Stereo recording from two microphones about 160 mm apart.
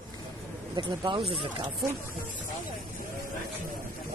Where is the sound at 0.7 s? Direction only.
30° right (ahead or behind).